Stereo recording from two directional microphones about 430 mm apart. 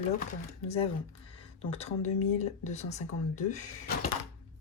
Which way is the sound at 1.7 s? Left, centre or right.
Centre.